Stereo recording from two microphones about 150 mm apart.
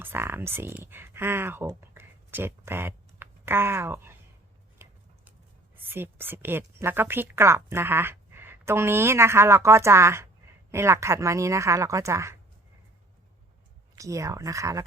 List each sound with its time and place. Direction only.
0.0 s speech: 15° right (ahead or behind)
4.8 s a sound: 15° right (ahead or behind)
5.7 s a woman's voice: 15° right (ahead or behind)
13.9 s speech: 20° right (ahead or behind)